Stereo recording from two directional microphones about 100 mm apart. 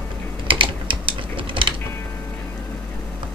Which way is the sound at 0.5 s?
60° right (ahead or behind).